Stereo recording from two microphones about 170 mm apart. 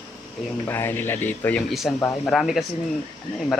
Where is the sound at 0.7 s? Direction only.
15° left (ahead or behind).